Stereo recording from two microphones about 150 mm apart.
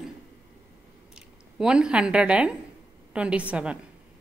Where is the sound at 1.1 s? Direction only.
5° right (ahead or behind).